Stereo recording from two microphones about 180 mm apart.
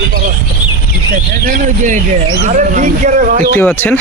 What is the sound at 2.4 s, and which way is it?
Speech, 45° right (ahead or behind).